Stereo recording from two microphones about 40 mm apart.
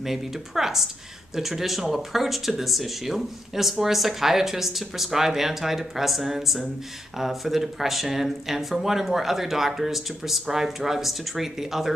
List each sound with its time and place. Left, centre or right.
0.0 s speech: centre